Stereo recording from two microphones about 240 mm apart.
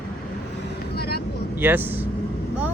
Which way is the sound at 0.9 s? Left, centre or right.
Left.